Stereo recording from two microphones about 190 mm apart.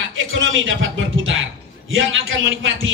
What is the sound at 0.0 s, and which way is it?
A man's voice, 90° right.